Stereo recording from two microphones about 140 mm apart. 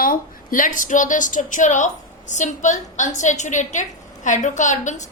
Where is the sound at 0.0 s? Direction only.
80° left.